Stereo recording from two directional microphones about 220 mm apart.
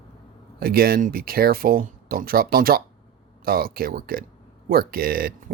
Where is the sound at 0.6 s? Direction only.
45° right (ahead or behind).